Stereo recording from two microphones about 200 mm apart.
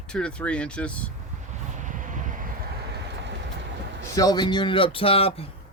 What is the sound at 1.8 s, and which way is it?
Vehicle, 40° right (ahead or behind).